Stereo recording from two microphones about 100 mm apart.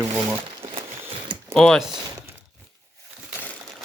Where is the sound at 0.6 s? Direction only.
70° right (ahead or behind).